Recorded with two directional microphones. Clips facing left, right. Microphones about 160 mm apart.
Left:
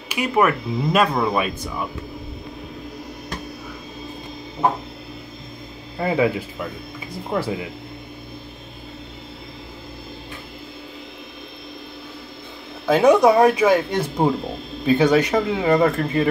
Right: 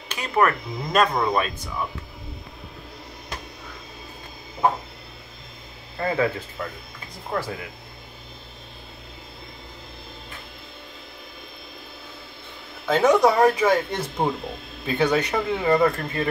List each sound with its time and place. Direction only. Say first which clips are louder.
0.1 s speech: left 3 dB; 10° left (ahead or behind)
5.9 s speech: left 4 dB; 15° left (ahead or behind)
12.8 s speech: left 4 dB; 10° left (ahead or behind)